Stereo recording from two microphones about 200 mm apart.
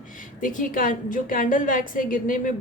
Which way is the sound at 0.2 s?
40° left (ahead or behind).